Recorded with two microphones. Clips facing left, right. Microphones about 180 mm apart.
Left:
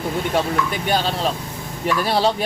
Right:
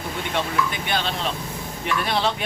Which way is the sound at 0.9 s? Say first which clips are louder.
Left 5 dB; 40° left (ahead or behind).